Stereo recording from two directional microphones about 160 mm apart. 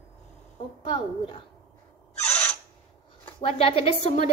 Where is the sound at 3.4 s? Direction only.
35° left (ahead or behind).